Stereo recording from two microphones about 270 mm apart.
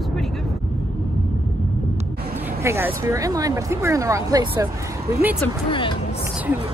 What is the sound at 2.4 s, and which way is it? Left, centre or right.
Speech, centre.